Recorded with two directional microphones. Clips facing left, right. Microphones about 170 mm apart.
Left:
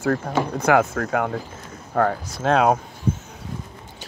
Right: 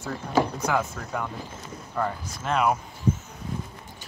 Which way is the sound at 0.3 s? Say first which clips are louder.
Even; 90° left.